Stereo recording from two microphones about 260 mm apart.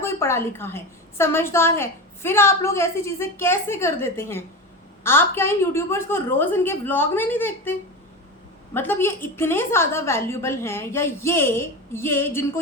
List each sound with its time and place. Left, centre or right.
0.0 s a sound: centre
1.2 s a woman's voice: centre
8.7 s a woman's voice: centre